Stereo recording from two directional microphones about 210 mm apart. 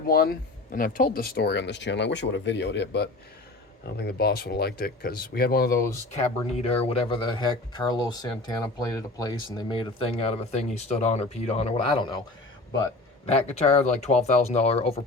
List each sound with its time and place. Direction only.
0.0 s speech: 45° left (ahead or behind)
6.6 s speech: 30° left (ahead or behind)